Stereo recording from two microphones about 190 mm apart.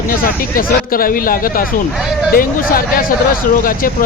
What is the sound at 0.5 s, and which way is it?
Speech, 50° left (ahead or behind).